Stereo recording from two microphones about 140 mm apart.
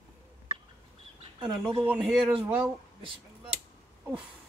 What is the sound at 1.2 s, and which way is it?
Speech, 35° right (ahead or behind).